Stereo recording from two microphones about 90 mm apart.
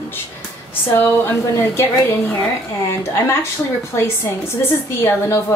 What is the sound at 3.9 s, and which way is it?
Speech, 30° left (ahead or behind).